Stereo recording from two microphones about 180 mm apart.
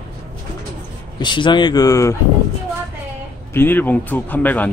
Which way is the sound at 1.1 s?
25° left (ahead or behind).